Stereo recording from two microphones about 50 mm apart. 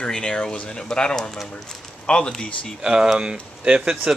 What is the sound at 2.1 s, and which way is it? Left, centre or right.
Speech, left.